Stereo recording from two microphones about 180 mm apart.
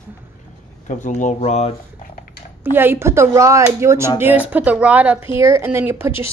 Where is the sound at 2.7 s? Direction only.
10° right (ahead or behind).